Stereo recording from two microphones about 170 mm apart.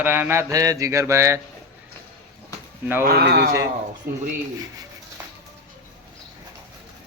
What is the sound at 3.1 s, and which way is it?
Speech, 65° right (ahead or behind).